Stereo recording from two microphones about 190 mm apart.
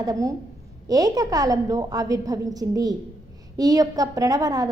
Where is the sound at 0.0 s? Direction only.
20° right (ahead or behind).